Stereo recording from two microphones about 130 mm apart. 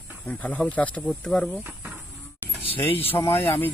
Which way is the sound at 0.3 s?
10° left (ahead or behind).